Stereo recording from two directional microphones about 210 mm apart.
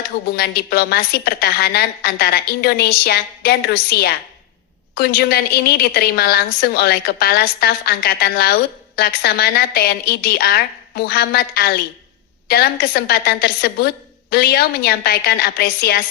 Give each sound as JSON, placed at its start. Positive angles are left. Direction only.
{"t": 0.3, "sound": "a woman's voice", "side_deg": 50}